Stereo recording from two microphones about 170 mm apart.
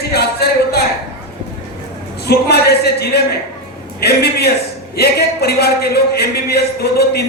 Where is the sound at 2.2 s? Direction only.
70° left (ahead or behind).